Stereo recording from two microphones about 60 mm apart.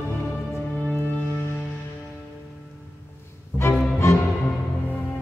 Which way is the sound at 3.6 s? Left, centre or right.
Left.